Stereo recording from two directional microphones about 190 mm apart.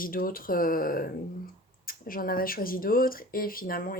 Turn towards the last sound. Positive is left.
turn(degrees=50)  # may be behind; listen again after turning